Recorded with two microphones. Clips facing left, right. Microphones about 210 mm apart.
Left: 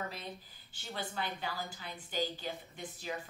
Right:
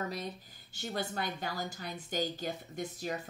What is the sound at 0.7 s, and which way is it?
A woman's voice, 45° right (ahead or behind).